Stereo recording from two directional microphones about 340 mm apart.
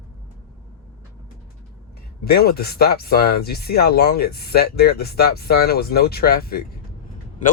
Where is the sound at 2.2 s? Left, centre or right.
Left.